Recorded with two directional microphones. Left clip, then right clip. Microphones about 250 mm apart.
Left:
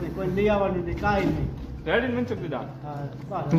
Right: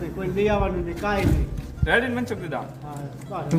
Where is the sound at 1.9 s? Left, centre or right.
Centre.